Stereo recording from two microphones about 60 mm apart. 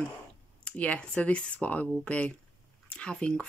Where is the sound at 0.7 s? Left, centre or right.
Left.